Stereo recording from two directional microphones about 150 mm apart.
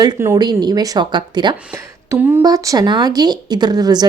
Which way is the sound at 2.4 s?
25° right (ahead or behind).